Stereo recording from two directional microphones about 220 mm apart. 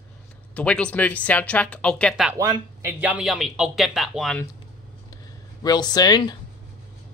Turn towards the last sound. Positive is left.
turn(degrees=20)  # may be behind; listen again after turning